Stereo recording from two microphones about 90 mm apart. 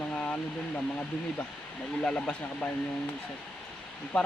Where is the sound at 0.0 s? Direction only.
15° left (ahead or behind).